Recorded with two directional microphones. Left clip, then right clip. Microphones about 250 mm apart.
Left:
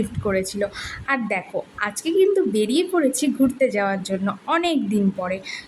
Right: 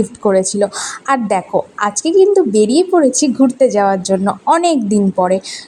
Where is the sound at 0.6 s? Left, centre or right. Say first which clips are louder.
Right 9 dB; centre.